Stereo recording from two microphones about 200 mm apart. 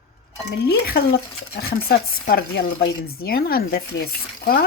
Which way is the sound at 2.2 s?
50° left (ahead or behind).